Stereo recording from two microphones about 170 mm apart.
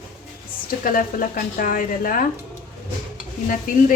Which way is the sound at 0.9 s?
55° left (ahead or behind).